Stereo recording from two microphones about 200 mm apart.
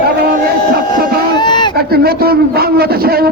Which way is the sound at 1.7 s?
50° right (ahead or behind).